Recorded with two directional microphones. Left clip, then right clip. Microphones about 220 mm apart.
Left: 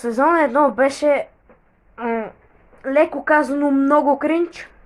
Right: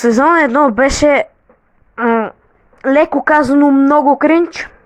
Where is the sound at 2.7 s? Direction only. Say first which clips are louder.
Right 6 dB; 45° right (ahead or behind).